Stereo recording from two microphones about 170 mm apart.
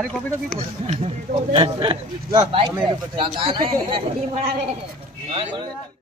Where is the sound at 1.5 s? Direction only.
30° right (ahead or behind).